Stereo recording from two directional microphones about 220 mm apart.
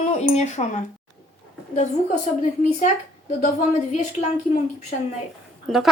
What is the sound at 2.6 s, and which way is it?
A woman's voice, 35° left (ahead or behind).